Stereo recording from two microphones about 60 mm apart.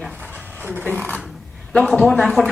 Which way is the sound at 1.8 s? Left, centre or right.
Centre.